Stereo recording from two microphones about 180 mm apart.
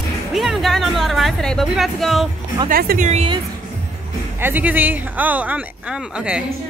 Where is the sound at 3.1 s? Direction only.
35° right (ahead or behind).